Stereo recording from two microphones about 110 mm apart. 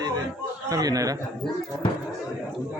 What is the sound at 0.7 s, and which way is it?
Speech, 35° right (ahead or behind).